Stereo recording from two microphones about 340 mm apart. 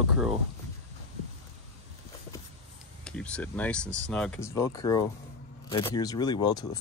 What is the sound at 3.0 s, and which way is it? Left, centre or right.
Speech, centre.